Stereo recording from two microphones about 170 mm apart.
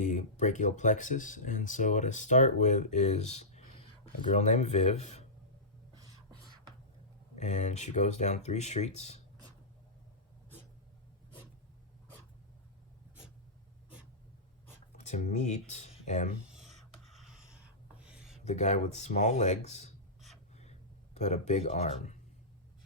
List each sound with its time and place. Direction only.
0.0 s speech: 45° left (ahead or behind)
7.3 s speech: 45° left (ahead or behind)
14.9 s speech: 45° left (ahead or behind)
16.6 s writing: centre (ahead or behind)
18.4 s speech: 45° left (ahead or behind)
20.6 s a sound: 40° left (ahead or behind)